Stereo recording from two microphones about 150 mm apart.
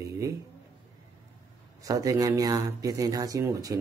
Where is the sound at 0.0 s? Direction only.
20° right (ahead or behind).